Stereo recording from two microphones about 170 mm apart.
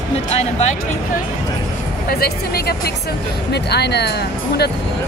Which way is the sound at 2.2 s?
65° left (ahead or behind).